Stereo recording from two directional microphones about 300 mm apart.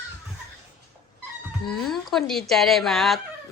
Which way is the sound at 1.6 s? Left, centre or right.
Centre.